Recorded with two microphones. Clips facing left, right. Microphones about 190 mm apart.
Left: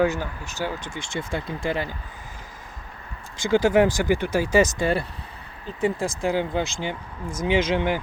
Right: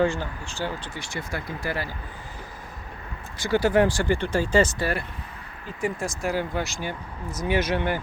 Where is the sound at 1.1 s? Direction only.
25° left (ahead or behind).